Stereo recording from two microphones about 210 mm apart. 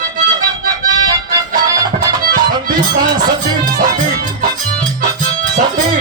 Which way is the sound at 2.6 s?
40° right (ahead or behind).